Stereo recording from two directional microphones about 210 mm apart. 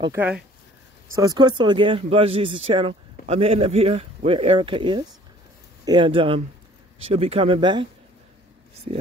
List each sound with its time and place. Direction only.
0.0 s speech: 10° right (ahead or behind)